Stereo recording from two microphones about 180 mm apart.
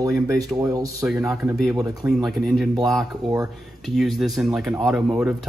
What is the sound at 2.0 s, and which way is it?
A man's voice, centre (ahead or behind).